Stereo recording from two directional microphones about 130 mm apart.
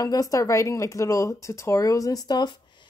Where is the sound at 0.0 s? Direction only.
25° left (ahead or behind).